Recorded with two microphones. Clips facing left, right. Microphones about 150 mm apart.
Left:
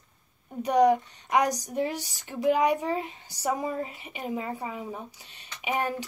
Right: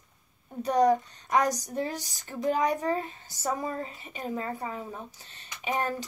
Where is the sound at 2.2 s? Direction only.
15° left (ahead or behind).